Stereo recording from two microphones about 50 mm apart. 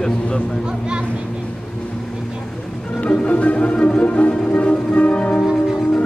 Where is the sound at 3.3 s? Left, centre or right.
Left.